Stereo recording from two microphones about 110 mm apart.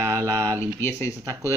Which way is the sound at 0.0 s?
30° right (ahead or behind).